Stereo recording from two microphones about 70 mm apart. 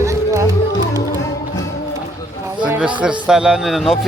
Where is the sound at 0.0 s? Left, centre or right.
Right.